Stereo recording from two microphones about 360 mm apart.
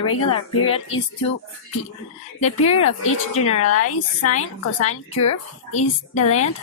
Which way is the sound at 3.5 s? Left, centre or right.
Left.